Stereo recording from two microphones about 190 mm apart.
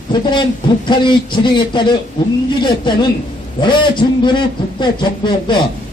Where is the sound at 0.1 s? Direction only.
25° left (ahead or behind).